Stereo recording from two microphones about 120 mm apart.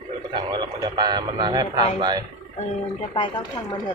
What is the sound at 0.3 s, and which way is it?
Speech, 40° right (ahead or behind).